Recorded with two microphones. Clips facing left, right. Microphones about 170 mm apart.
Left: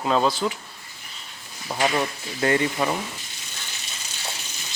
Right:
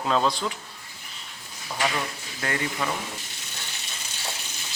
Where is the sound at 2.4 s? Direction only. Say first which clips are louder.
Left 7 dB; 25° left (ahead or behind).